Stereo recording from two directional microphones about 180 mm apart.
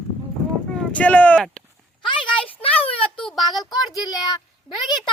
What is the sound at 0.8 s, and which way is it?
Speech, 10° left (ahead or behind).